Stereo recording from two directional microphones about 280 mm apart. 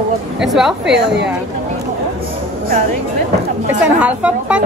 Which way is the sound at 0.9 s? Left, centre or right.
Right.